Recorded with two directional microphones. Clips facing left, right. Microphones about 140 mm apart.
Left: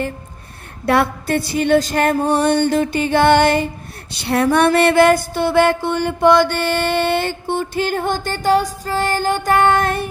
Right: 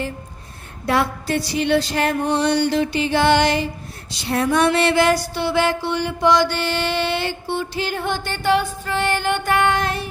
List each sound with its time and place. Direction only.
0.9 s music: 60° left (ahead or behind)
4.2 s a sound: 65° left (ahead or behind)
4.5 s music: 60° left (ahead or behind)